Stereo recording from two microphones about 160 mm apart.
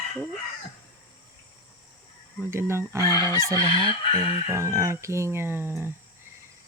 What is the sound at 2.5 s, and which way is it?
Speech, 15° right (ahead or behind).